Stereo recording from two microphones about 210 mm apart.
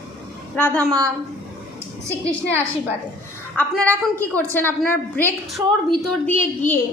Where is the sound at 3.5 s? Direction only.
5° left (ahead or behind).